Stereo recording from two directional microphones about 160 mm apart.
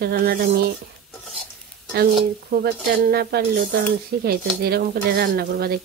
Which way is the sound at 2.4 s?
70° right (ahead or behind).